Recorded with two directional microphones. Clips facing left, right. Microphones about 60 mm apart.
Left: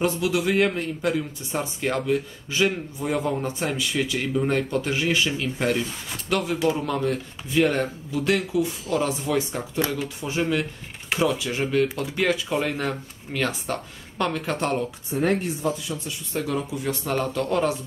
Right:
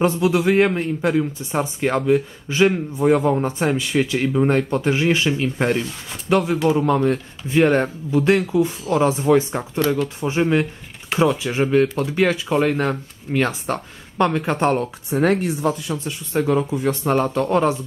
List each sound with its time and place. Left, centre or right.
0.0 s a man's voice: right
15.0 s speech: right
16.3 s speech: right